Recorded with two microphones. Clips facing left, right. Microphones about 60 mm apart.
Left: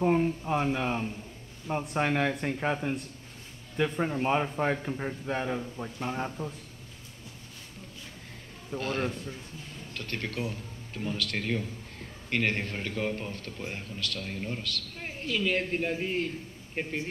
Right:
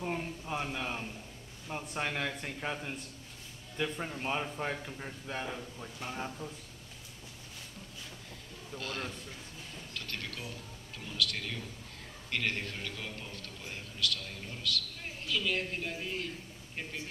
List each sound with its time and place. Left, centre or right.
0.0 s a man's voice: left
8.7 s a man's voice: left